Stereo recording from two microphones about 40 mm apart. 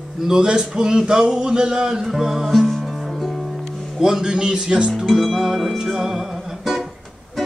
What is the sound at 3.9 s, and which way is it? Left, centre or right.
Speech, centre.